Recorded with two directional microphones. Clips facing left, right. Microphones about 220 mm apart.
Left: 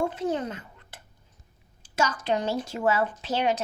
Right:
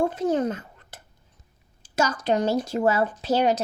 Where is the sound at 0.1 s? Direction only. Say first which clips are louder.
Right 5 dB; 45° right (ahead or behind).